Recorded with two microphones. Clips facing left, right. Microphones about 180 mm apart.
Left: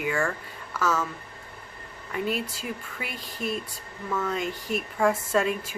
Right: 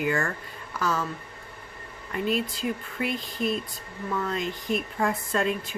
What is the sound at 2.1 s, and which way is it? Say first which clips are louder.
Speech: right 2 dB; 5° left (ahead or behind).